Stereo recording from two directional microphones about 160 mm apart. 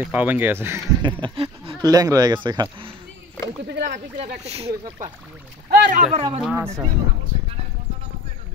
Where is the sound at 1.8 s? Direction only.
25° right (ahead or behind).